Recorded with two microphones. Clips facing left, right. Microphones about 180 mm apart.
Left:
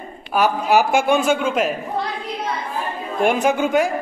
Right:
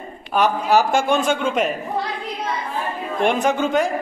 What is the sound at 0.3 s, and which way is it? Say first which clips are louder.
Speech: even; 10° left (ahead or behind).